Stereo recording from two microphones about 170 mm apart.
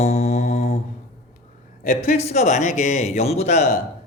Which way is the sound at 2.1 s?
40° left (ahead or behind).